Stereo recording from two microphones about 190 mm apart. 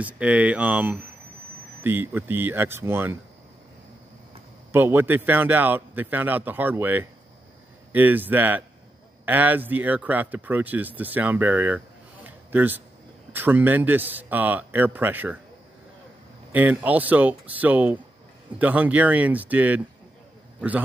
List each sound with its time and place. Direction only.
0.0 s a man's voice: 5° right (ahead or behind)
4.7 s a man's voice: 10° right (ahead or behind)
16.5 s a man's voice: 10° right (ahead or behind)